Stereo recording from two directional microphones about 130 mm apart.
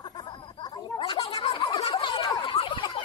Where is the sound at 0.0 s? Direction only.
35° left (ahead or behind).